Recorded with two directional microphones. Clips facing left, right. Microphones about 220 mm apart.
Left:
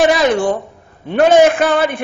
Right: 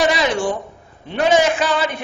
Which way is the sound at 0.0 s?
50° left (ahead or behind).